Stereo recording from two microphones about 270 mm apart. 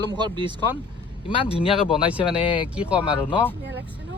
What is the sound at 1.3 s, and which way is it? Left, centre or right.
Speech, centre.